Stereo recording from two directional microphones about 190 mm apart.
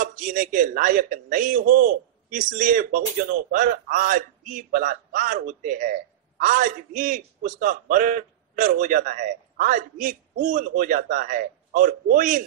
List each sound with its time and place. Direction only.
0.0 s a man's voice: 45° right (ahead or behind)